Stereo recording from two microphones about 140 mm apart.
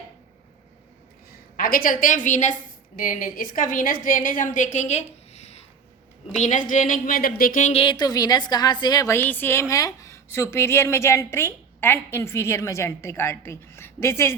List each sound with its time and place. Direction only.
1.5 s a woman's voice: 90° left; by 5.6 s 50° left (ahead or behind)
6.4 s a woman's voice: 65° left (ahead or behind); by 7.7 s 80° left
7.7 s a woman's voice: 40° left (ahead or behind); by 14.3 s 20° left (ahead or behind)